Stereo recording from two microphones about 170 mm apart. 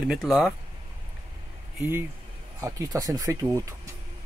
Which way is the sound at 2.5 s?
20° right (ahead or behind).